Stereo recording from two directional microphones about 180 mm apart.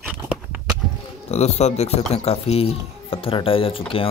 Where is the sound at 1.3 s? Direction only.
35° left (ahead or behind).